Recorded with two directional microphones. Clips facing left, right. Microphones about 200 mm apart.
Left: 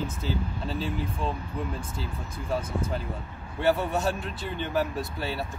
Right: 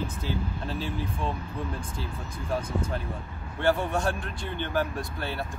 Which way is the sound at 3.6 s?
5° left (ahead or behind).